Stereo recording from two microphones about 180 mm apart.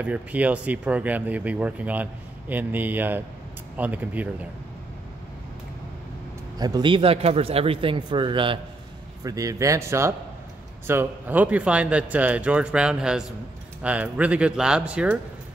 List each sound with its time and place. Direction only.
0.0 s speech: 10° right (ahead or behind)
6.6 s speech: 25° right (ahead or behind); by 15.1 s 5° right (ahead or behind)